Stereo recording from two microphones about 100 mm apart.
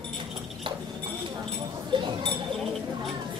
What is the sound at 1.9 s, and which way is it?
Chink, 55° right (ahead or behind).